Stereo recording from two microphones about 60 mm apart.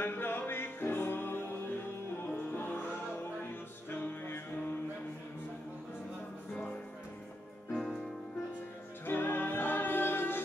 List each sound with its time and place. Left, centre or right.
0.0 s music: left
3.9 s music: left
7.7 s music: centre
9.0 s music: left